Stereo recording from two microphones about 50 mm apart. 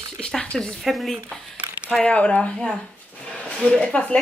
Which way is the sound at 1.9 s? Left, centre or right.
Left.